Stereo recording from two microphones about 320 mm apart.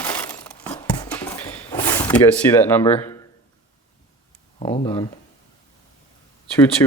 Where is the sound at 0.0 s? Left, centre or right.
Centre.